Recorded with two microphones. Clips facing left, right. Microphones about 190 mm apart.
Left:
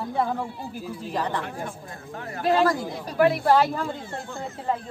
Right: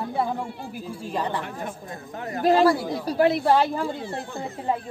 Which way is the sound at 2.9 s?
30° right (ahead or behind).